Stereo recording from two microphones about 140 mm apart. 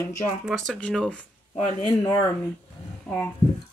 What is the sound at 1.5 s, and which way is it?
Speech, 40° left (ahead or behind).